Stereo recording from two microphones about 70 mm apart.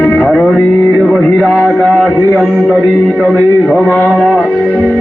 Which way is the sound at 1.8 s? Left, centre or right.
Centre.